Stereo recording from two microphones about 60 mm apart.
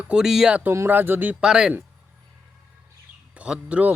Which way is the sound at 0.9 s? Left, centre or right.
Right.